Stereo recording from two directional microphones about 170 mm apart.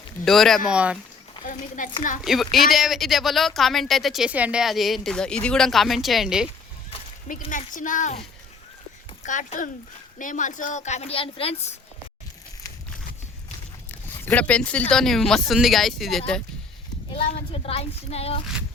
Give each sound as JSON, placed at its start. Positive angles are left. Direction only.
{"t": 0.3, "sound": "speech", "side_deg": 0}
{"t": 1.5, "sound": "a woman's voice", "side_deg": 50}
{"t": 2.2, "sound": "speech", "side_deg": 0}
{"t": 7.5, "sound": "a woman's voice", "side_deg": 50}
{"t": 9.2, "sound": "a woman's voice", "side_deg": 45}
{"t": 14.3, "sound": "speech", "side_deg": 10}
{"t": 17.2, "sound": "speech", "side_deg": 35}